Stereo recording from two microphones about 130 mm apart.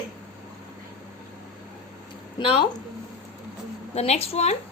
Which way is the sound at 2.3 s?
40° left (ahead or behind).